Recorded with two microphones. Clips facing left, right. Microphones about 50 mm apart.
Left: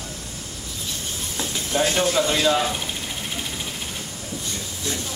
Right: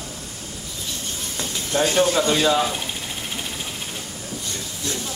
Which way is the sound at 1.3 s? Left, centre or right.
Centre.